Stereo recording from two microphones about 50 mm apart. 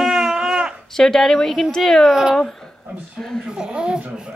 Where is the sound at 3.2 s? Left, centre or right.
Centre.